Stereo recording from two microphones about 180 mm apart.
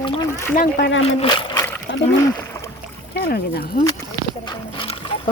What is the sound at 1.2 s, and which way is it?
Speech, 30° left (ahead or behind).